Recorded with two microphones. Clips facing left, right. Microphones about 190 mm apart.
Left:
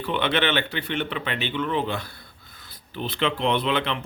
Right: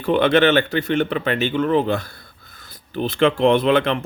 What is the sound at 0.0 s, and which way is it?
Speech, 45° right (ahead or behind).